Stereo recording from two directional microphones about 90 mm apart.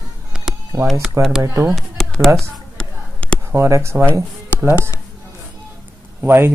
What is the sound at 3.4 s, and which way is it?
Speech, 30° right (ahead or behind).